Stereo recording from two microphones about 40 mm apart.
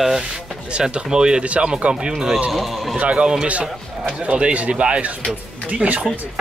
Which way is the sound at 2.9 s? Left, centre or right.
Right.